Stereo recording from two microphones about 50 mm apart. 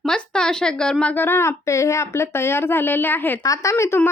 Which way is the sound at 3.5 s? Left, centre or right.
Left.